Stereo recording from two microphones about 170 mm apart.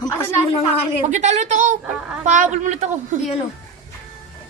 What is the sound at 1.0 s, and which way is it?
A man's voice, 45° right (ahead or behind).